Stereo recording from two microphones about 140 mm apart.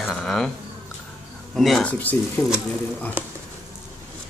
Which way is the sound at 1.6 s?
Centre (ahead or behind).